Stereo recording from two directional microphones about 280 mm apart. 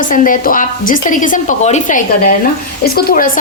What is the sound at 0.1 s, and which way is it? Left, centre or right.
A woman's voice, left.